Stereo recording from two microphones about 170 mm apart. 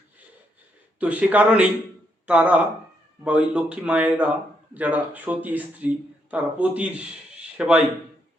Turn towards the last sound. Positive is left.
turn(degrees=-5)  # may be behind; listen again after turning